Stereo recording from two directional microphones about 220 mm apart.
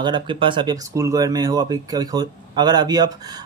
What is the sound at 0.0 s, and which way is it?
Speech, 20° right (ahead or behind).